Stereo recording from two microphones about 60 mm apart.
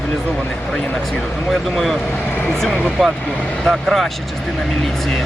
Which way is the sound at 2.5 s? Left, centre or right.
Centre.